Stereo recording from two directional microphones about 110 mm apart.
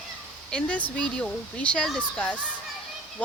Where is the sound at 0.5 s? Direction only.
10° left (ahead or behind).